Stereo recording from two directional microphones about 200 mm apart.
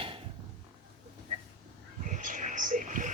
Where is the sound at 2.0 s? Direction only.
40° right (ahead or behind).